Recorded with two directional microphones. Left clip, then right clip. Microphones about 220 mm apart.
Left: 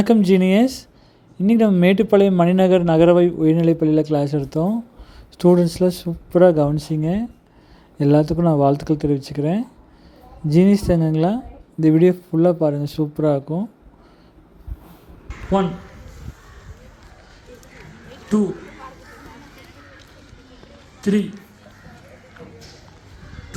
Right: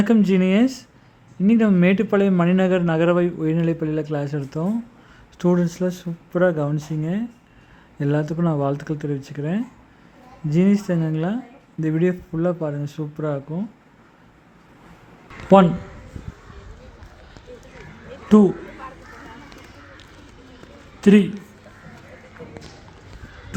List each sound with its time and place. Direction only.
0.0 s speech: 15° left (ahead or behind)
18.3 s a man's voice: 25° right (ahead or behind)
21.0 s a man's voice: 25° right (ahead or behind)